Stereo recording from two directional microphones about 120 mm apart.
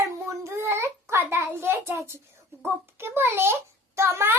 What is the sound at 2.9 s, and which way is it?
A child's voice, 20° right (ahead or behind).